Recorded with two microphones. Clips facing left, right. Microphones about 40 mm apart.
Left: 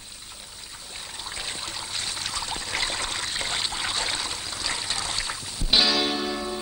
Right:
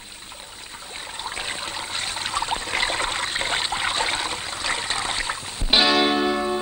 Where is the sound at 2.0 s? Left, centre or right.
Right.